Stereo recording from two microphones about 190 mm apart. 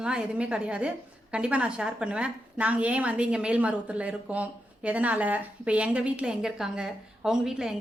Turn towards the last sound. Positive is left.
turn(degrees=-5)  # may be behind; listen again after turning